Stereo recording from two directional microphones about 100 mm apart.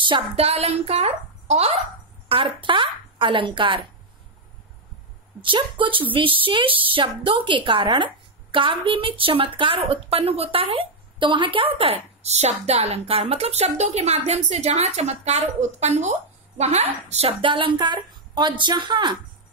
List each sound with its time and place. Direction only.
0.0 s a woman's voice: 75° right (ahead or behind); by 1.8 s 90° right
2.2 s a woman's voice: 65° right (ahead or behind)
5.4 s a woman's voice: 55° right (ahead or behind)